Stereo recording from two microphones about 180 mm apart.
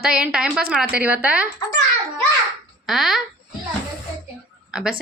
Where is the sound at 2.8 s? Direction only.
Centre (ahead or behind).